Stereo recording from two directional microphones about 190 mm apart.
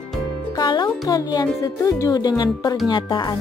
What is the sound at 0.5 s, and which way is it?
Music, 25° left (ahead or behind).